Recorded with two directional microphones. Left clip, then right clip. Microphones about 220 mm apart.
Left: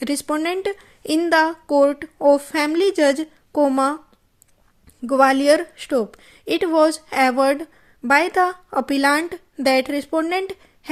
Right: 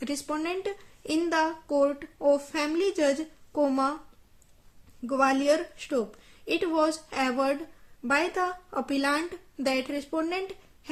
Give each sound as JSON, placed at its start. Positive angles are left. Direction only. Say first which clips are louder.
{"t": 0.0, "sound": "a woman's voice", "louder": "left 9 dB", "side_deg": 40}
{"t": 5.0, "sound": "a woman's voice", "louder": "left 9 dB", "side_deg": 40}